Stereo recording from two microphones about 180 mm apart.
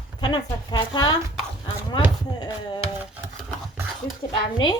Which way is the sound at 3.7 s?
10° right (ahead or behind).